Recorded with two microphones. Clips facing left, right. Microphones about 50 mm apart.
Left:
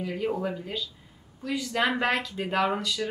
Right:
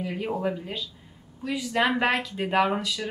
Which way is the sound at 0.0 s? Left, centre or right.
Centre.